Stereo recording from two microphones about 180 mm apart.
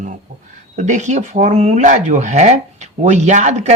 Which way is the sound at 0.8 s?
40° right (ahead or behind).